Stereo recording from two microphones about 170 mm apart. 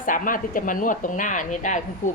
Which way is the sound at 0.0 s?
50° left (ahead or behind).